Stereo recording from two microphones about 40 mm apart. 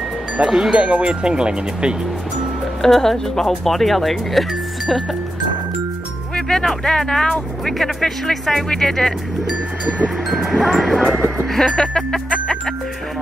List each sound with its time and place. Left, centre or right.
0.5 s speech: centre
0.7 s speech: right
2.8 s speech: centre
6.3 s speech: centre
10.3 s speech: centre
11.5 s speech: centre